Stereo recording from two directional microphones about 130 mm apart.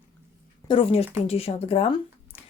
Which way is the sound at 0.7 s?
45° left (ahead or behind).